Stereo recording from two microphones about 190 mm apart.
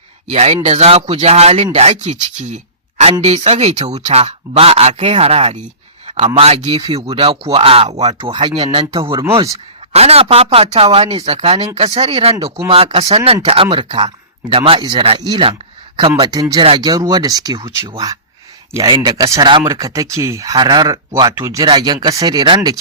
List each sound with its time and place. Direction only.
0.3 s speech: 35° right (ahead or behind)